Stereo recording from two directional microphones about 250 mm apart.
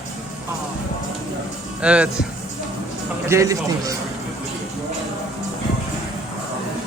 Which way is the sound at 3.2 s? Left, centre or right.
Centre.